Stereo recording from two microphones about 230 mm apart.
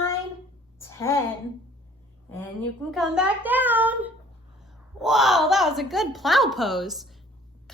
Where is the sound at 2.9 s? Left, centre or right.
Centre.